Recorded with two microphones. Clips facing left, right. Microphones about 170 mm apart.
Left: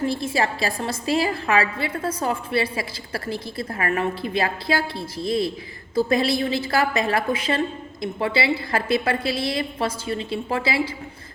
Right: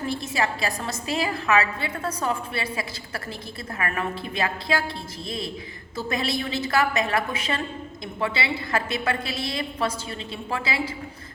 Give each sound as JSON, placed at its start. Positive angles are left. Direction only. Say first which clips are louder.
{"t": 0.0, "sound": "a woman's voice", "louder": "left 4 dB", "side_deg": 30}